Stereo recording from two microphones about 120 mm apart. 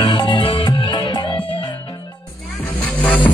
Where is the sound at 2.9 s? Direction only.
15° left (ahead or behind).